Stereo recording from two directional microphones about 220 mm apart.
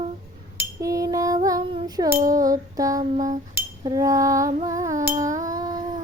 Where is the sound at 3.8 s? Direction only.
15° right (ahead or behind).